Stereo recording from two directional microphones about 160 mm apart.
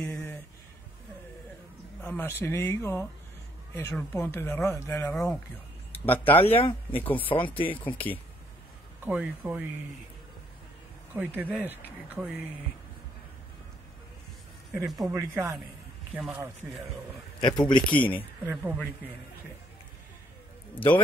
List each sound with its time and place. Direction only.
0.0 s a sound: 10° left (ahead or behind)
2.0 s speech: 10° left (ahead or behind)
3.9 s speech: 5° left (ahead or behind)
5.1 s speech: centre (ahead or behind)
6.4 s speech: 35° left (ahead or behind)
9.0 s speech: 10° right (ahead or behind)
11.1 s speech: 10° right (ahead or behind)
14.9 s speech: centre (ahead or behind)
15.1 s speech: 15° right (ahead or behind)
17.4 s speech: 30° left (ahead or behind)
18.5 s speech: 10° right (ahead or behind)